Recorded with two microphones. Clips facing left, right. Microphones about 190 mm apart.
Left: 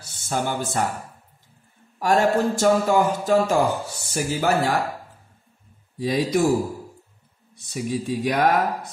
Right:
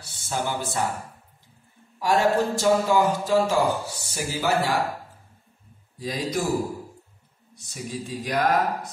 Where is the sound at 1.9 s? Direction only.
50° left (ahead or behind).